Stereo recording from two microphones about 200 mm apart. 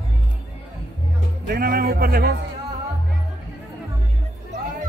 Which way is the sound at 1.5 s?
50° right (ahead or behind).